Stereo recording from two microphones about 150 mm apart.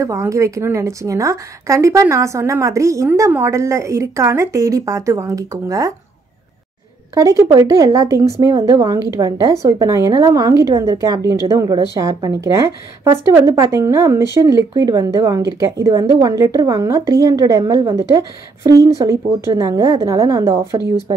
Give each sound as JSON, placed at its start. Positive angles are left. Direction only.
{"t": 0.0, "sound": "a woman's voice", "side_deg": -20}
{"t": 7.2, "sound": "a woman's voice", "side_deg": -20}